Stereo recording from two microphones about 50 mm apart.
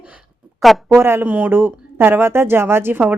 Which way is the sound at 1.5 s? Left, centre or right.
Right.